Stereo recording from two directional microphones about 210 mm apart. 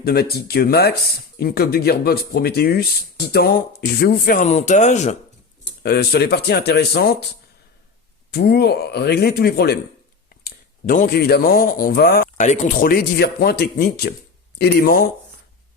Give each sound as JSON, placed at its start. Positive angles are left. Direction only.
{"t": 0.0, "sound": "speech", "side_deg": 45}
{"t": 5.8, "sound": "speech", "side_deg": 50}
{"t": 8.3, "sound": "speech", "side_deg": 50}